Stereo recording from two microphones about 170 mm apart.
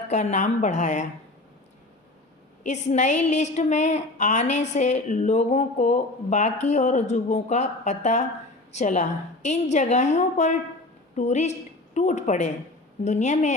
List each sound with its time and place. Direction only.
0.1 s a woman's voice: 45° left (ahead or behind)
2.6 s a woman's voice: 40° left (ahead or behind)